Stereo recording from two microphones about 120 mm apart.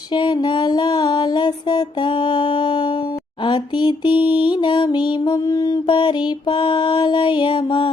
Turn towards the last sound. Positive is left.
turn(degrees=45)  # may be behind; listen again after turning